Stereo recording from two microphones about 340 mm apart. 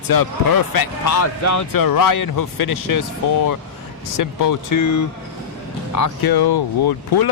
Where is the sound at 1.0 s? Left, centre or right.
Left.